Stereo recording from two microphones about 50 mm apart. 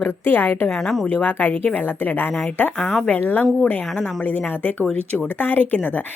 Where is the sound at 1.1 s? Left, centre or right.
Left.